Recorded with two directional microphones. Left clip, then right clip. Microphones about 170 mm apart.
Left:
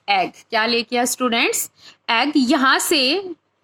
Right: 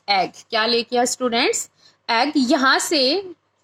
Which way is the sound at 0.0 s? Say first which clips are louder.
Left 1 dB; 10° left (ahead or behind).